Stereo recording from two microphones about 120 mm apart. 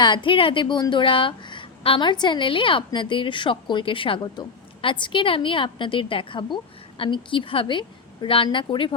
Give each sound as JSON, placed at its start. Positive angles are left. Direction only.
{"t": 0.0, "sound": "a woman's voice", "side_deg": 40}